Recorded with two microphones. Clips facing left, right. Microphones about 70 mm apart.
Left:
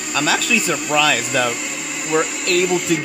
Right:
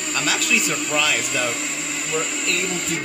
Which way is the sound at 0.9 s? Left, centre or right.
Left.